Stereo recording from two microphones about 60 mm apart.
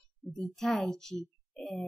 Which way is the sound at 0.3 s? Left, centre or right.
Centre.